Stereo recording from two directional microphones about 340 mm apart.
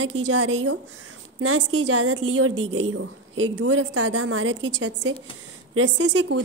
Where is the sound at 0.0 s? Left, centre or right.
Right.